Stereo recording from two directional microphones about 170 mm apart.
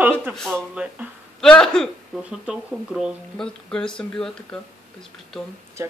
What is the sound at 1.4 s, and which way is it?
Speech, 5° left (ahead or behind).